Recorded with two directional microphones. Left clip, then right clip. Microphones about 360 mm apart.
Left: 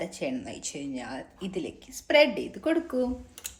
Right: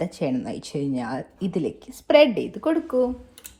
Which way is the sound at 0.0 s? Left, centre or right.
Centre.